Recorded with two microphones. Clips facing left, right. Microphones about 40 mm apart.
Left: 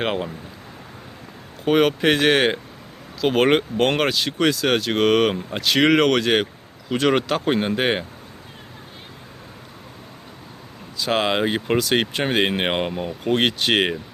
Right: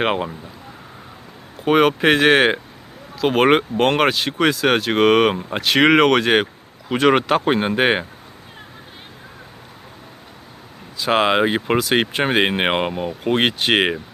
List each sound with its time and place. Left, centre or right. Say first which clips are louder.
0.0 s speech: right 4 dB; right
1.6 s speech: right 2 dB; centre
3.2 s speech: right 2 dB; centre; by 8.0 s right
10.9 s speech: right 4 dB; right
12.9 s speech: right 2 dB; centre